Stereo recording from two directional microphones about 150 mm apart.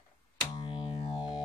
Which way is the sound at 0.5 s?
35° left (ahead or behind).